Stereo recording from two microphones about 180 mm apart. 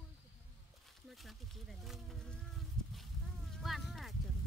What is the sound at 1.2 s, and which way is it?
Speech, centre (ahead or behind).